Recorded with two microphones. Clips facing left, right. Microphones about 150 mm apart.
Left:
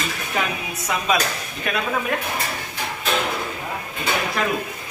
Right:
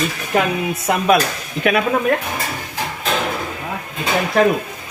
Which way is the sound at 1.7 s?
75° right (ahead or behind).